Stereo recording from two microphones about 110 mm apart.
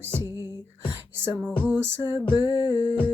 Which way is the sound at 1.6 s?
20° right (ahead or behind).